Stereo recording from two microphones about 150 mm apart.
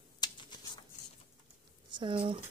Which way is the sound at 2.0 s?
35° right (ahead or behind).